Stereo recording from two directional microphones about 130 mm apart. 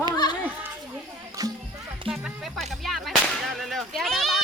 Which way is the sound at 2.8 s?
Centre (ahead or behind).